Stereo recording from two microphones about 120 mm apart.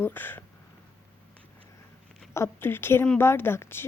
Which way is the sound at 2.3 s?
20° left (ahead or behind).